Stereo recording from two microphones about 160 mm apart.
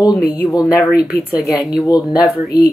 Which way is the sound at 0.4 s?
20° left (ahead or behind).